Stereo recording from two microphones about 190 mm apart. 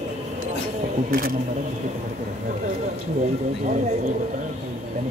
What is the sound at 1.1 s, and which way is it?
Speech, 50° right (ahead or behind).